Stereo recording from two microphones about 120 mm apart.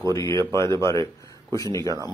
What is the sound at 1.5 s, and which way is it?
Speech, 25° left (ahead or behind).